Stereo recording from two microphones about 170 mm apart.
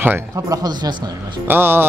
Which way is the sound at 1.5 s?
15° right (ahead or behind).